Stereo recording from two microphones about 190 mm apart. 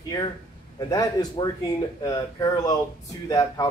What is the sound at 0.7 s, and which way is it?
Speech, 20° left (ahead or behind).